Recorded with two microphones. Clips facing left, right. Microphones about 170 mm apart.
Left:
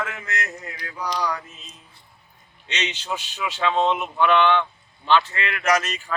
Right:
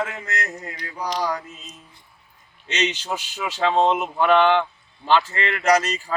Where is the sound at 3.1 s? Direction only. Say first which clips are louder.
Right 1 dB; 40° right (ahead or behind).